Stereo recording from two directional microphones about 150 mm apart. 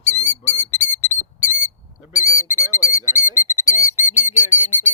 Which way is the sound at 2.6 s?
20° left (ahead or behind).